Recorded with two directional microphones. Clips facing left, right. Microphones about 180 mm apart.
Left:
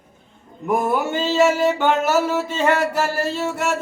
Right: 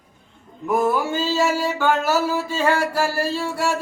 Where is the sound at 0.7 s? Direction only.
20° left (ahead or behind).